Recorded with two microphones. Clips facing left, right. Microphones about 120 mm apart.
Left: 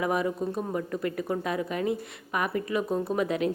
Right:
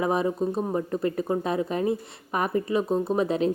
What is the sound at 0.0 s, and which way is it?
Speech, 30° right (ahead or behind).